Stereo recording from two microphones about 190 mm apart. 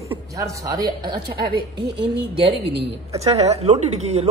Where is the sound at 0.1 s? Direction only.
15° right (ahead or behind).